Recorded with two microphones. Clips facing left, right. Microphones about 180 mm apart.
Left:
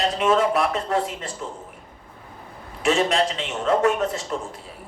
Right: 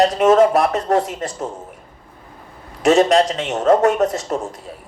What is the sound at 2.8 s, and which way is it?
Speech, 40° right (ahead or behind).